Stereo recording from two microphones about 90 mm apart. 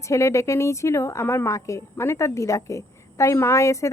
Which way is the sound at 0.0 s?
35° left (ahead or behind).